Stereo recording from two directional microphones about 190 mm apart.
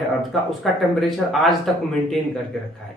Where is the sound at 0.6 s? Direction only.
Centre (ahead or behind).